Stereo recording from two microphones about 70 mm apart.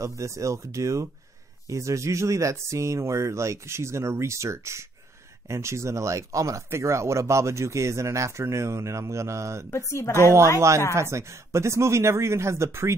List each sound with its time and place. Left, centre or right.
0.0 s speech: right
9.7 s speech: left
11.0 s speech: right